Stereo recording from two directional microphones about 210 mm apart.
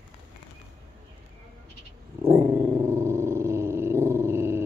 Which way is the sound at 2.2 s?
10° right (ahead or behind).